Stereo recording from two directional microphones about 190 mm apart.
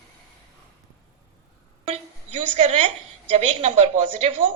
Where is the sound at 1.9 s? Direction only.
30° right (ahead or behind).